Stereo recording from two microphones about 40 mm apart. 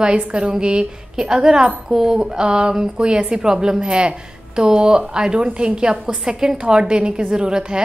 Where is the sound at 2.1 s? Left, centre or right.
Right.